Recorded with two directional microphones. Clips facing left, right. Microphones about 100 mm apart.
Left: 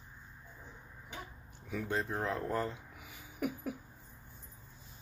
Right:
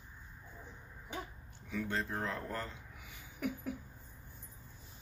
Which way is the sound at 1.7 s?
10° left (ahead or behind).